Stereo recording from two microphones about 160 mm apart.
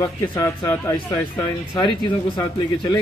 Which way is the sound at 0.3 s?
20° left (ahead or behind).